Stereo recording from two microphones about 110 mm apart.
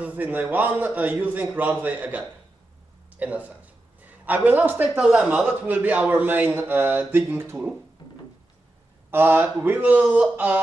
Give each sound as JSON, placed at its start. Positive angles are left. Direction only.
{"t": 0.0, "sound": "a man's voice", "side_deg": -15}
{"t": 9.1, "sound": "a man's voice", "side_deg": -20}